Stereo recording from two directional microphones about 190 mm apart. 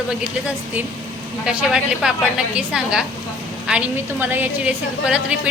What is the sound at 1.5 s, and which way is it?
A woman's voice, 5° right (ahead or behind).